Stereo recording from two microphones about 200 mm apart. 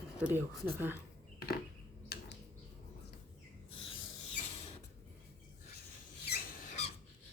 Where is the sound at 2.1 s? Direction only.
50° left (ahead or behind).